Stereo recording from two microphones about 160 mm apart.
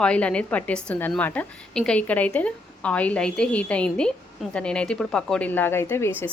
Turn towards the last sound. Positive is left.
turn(degrees=15)  # may be behind; listen again after turning